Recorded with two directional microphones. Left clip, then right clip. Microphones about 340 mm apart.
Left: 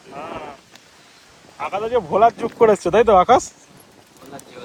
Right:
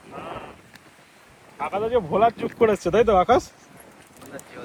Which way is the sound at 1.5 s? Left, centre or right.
Centre.